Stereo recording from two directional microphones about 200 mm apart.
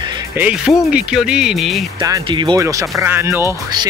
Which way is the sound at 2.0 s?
20° right (ahead or behind).